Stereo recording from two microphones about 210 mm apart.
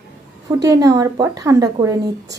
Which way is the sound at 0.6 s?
15° right (ahead or behind).